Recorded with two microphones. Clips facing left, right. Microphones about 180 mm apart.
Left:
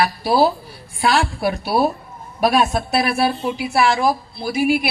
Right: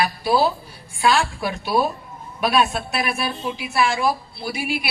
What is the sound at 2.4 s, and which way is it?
Speech, 40° left (ahead or behind).